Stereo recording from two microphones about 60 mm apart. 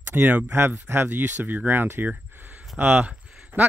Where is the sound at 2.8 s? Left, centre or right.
Right.